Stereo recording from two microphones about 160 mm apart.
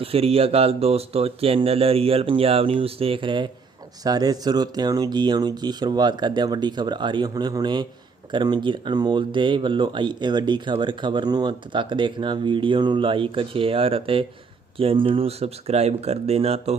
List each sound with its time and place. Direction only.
0.0 s speech: 35° right (ahead or behind)